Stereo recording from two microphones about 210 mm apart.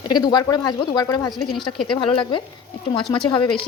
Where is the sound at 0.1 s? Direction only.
20° left (ahead or behind).